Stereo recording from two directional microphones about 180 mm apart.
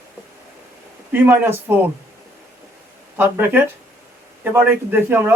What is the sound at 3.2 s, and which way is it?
A man's voice, 10° right (ahead or behind).